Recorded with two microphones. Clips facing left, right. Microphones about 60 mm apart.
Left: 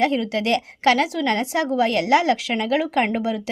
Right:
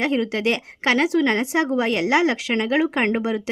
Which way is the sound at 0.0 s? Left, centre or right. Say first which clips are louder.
Even; right.